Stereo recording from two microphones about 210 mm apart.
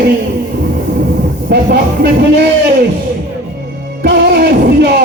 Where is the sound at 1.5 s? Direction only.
50° right (ahead or behind).